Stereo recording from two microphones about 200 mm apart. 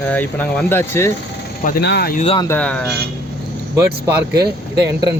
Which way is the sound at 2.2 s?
25° left (ahead or behind).